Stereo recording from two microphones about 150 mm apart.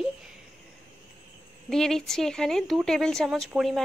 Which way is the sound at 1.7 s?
Centre (ahead or behind).